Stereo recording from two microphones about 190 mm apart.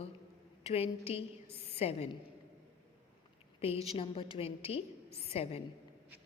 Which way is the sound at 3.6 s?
30° left (ahead or behind).